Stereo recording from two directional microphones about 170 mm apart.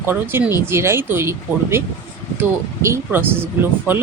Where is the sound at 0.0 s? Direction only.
10° right (ahead or behind).